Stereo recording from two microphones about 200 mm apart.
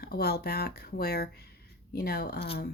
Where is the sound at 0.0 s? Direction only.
50° left (ahead or behind).